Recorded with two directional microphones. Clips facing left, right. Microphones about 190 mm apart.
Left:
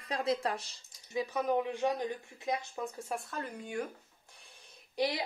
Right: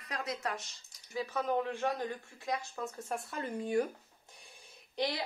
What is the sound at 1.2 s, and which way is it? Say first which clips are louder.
Speech: left 2 dB; 15° left (ahead or behind).